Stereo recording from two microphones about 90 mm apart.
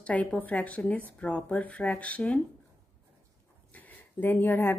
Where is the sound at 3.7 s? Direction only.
20° left (ahead or behind).